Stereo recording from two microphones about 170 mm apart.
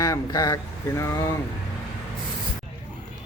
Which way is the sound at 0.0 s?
20° left (ahead or behind).